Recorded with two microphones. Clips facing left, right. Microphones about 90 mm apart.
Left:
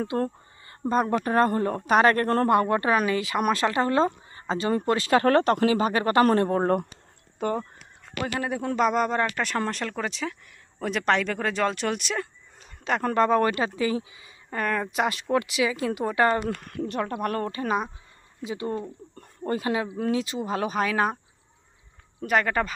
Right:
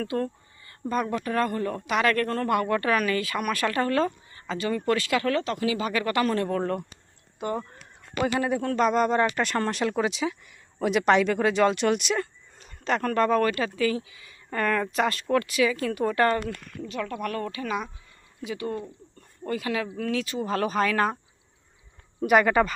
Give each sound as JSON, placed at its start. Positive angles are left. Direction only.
{"t": 0.2, "sound": "speech", "side_deg": 30}
{"t": 2.5, "sound": "speech", "side_deg": 30}
{"t": 8.1, "sound": "a man's voice", "side_deg": -25}
{"t": 8.4, "sound": "speech", "side_deg": 0}
{"t": 13.0, "sound": "speech", "side_deg": 20}
{"t": 14.5, "sound": "speech", "side_deg": 10}
{"t": 16.5, "sound": "speech", "side_deg": 50}
{"t": 17.0, "sound": "speech", "side_deg": 35}
{"t": 18.4, "sound": "speech", "side_deg": 25}
{"t": 20.4, "sound": "speech", "side_deg": 10}
{"t": 22.2, "sound": "speech", "side_deg": -5}